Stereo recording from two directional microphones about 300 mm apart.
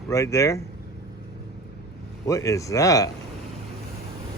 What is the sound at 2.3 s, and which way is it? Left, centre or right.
Speech, centre.